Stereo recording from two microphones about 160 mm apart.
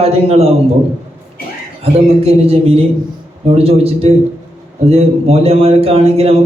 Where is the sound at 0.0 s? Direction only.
40° right (ahead or behind).